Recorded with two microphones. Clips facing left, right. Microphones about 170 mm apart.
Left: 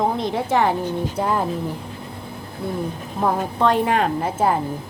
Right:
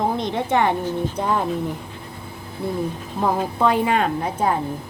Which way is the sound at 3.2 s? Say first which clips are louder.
Even; centre (ahead or behind).